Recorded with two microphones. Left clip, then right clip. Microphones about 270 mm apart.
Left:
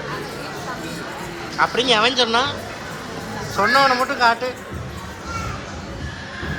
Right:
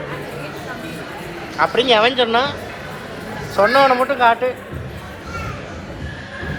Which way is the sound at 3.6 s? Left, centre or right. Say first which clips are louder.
Right 3 dB; centre.